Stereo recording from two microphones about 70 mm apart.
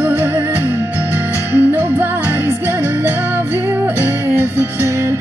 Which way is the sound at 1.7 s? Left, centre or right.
Right.